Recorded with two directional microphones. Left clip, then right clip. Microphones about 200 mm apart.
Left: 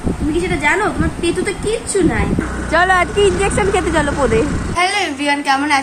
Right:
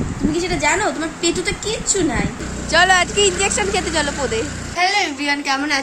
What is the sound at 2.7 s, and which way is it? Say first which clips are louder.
Speech: left 1 dB; 5° right (ahead or behind).